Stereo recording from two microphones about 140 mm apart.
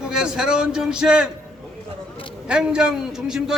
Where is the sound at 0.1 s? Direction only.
5° right (ahead or behind).